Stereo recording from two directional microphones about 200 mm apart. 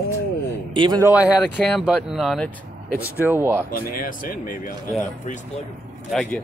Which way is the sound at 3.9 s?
45° left (ahead or behind).